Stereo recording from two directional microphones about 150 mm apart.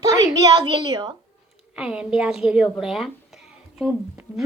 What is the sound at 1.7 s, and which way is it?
A woman's voice, 5° right (ahead or behind).